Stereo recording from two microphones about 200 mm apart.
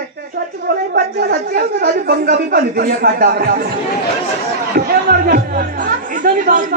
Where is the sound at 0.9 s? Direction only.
55° right (ahead or behind).